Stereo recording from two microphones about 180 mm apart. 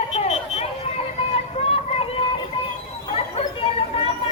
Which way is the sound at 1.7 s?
35° left (ahead or behind).